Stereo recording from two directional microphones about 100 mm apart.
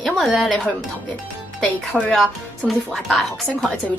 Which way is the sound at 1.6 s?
10° left (ahead or behind).